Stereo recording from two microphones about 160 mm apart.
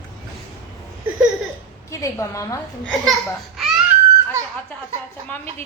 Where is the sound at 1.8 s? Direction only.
20° left (ahead or behind).